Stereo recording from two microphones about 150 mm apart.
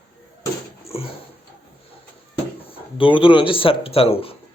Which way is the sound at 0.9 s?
40° left (ahead or behind).